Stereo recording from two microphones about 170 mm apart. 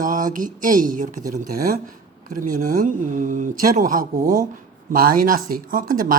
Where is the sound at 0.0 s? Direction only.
50° right (ahead or behind).